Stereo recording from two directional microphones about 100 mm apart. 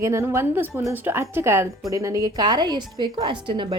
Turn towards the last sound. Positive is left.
turn(degrees=-55)  # may be behind; listen again after turning